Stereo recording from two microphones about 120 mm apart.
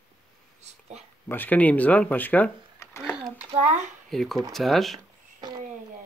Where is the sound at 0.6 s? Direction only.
70° right (ahead or behind).